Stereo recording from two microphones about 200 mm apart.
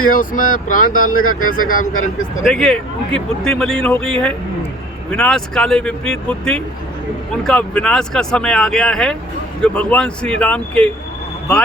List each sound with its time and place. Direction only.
0.1 s speech: 45° left (ahead or behind)
1.1 s speech: 90° left
1.7 s speech: 40° left (ahead or behind)
2.4 s speech: centre (ahead or behind)